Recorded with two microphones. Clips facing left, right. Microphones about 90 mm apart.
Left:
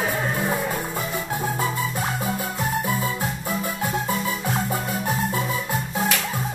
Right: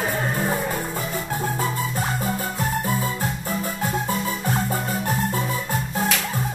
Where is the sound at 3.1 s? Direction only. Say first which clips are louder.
Even; 15° left (ahead or behind).